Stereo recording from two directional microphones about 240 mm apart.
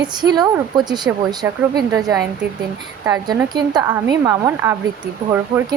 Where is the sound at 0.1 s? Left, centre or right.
Centre.